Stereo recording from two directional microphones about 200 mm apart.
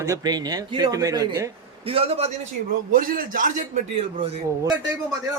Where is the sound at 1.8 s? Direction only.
30° right (ahead or behind).